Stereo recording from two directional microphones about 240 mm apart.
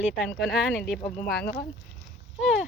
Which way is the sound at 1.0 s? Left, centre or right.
Left.